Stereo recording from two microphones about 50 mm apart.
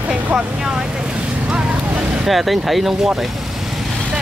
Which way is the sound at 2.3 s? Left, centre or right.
Centre.